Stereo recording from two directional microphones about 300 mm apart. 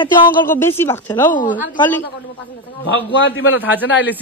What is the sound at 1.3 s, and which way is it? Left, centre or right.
Speech, left.